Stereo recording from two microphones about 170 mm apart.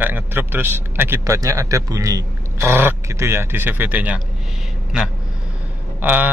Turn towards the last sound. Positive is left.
turn(degrees=-10)  # may be behind; listen again after turning